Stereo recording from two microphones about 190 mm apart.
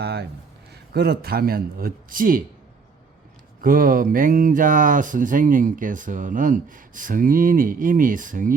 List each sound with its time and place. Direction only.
0.0 s speech: 60° right (ahead or behind)
3.6 s speech: 50° right (ahead or behind)